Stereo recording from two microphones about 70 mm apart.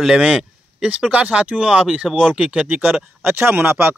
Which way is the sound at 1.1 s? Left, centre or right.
Centre.